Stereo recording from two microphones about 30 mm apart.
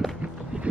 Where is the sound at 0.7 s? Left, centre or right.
Right.